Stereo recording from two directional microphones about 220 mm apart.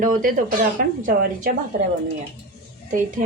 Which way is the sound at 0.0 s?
40° right (ahead or behind).